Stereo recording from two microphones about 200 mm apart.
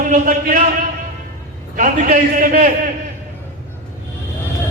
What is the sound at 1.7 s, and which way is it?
Speech, 40° right (ahead or behind).